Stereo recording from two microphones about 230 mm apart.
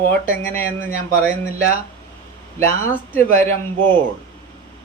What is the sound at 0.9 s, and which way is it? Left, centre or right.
Speech, right.